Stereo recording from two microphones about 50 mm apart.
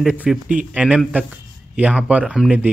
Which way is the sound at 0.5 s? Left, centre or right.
Right.